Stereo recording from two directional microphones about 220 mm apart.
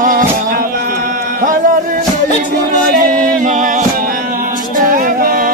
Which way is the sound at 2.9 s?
40° right (ahead or behind).